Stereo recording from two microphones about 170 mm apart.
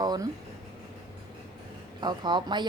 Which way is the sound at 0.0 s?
25° right (ahead or behind).